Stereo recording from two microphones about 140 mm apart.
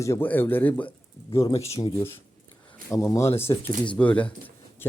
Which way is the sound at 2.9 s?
20° left (ahead or behind).